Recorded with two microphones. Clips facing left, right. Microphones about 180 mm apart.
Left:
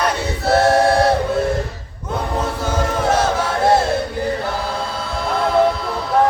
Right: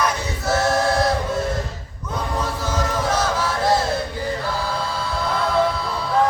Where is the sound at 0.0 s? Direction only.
65° left (ahead or behind).